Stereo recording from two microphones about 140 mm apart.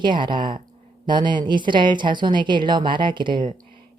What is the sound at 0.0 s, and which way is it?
Speech, 35° right (ahead or behind).